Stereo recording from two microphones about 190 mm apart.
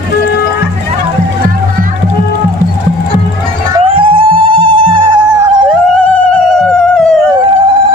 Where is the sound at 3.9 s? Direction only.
30° right (ahead or behind).